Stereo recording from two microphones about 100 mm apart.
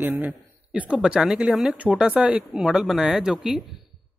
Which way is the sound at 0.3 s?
10° right (ahead or behind).